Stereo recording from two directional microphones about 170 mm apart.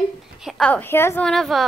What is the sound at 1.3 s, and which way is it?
Speech, centre (ahead or behind).